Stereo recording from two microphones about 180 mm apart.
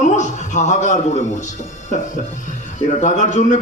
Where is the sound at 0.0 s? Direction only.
40° left (ahead or behind).